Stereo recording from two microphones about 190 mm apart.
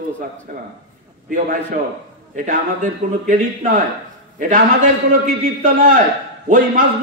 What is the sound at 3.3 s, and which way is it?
Speech, 45° right (ahead or behind).